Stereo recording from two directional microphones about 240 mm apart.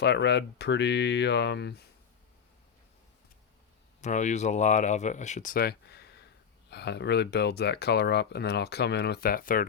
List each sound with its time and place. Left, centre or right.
0.0 s speech: left
4.0 s speech: left